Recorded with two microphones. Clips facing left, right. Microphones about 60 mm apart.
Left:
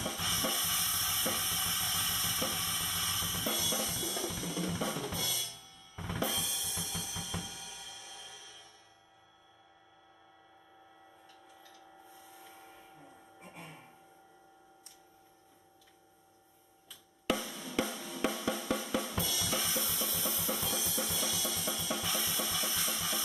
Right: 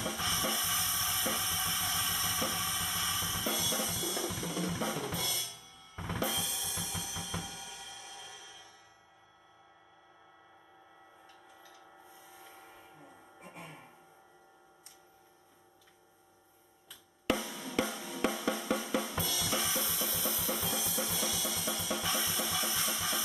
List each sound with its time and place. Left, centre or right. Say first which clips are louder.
0.0 s drum kit: right 1 dB; centre
11.6 s a sound: even; centre
17.3 s drum: right 1 dB; centre